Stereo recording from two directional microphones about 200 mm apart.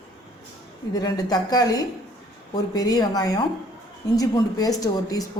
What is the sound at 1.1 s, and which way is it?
Speech, 20° left (ahead or behind).